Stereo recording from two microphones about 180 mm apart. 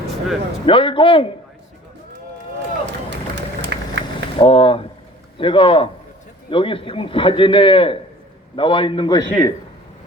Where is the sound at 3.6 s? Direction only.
75° right (ahead or behind).